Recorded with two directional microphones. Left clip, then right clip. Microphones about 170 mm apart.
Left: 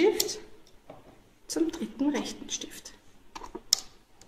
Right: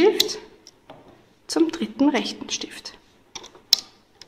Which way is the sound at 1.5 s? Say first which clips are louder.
Right 8 dB; 25° right (ahead or behind).